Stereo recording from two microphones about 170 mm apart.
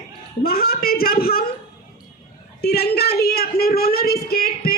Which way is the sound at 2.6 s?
70° left (ahead or behind).